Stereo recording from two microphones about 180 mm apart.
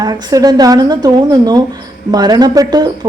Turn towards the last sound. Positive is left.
turn(degrees=-25)  # may be behind; listen again after turning